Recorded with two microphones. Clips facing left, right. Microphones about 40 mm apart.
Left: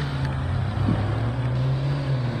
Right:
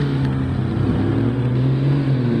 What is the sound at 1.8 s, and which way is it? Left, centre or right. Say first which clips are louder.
Vehicle: right 8 dB; right.